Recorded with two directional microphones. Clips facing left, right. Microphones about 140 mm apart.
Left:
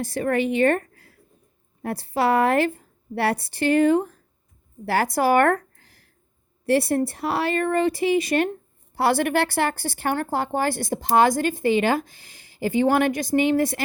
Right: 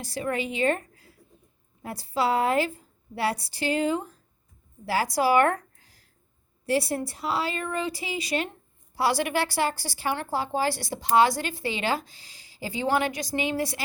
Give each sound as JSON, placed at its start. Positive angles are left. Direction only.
{"t": 0.0, "sound": "a woman's voice", "side_deg": 55}